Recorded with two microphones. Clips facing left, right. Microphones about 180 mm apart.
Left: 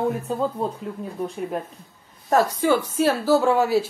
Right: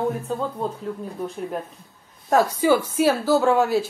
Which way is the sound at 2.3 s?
5° right (ahead or behind).